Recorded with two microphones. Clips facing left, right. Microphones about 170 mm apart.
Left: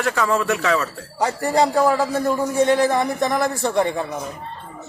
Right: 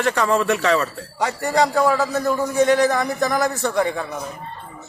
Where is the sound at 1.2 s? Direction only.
30° left (ahead or behind).